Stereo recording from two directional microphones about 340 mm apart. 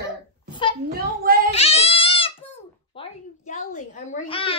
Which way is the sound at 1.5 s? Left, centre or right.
Centre.